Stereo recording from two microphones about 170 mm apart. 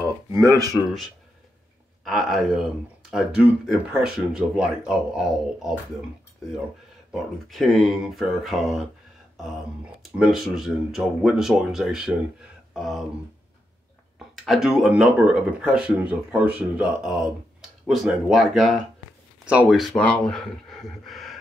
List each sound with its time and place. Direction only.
0.3 s speech: 20° right (ahead or behind)
2.0 s speech: centre (ahead or behind)
7.1 s speech: centre (ahead or behind)
10.1 s speech: 5° right (ahead or behind)
14.1 s speech: centre (ahead or behind)